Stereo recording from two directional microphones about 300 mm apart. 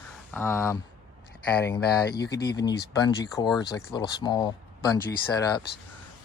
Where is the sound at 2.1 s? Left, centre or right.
Left.